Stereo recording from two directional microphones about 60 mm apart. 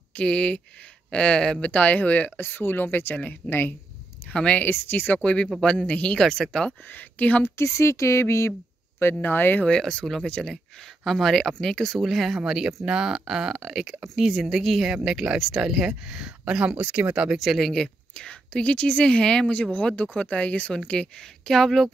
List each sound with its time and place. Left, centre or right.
0.1 s speech: centre; by 3.7 s left
4.3 s speech: centre
4.7 s a woman's voice: left; by 6.7 s centre
6.9 s speech: left
7.4 s speech: left
9.2 s speech: left
9.7 s a woman's voice: centre
12.4 s a woman's voice: centre
16.7 s speech: right
17.4 s a woman's voice: centre